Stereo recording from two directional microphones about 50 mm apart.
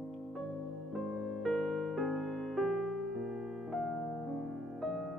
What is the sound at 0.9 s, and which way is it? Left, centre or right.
Music, centre.